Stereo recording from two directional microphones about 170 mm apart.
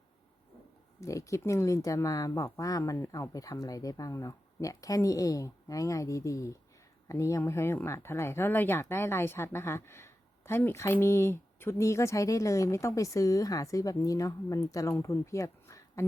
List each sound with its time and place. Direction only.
1.0 s speech: 20° left (ahead or behind)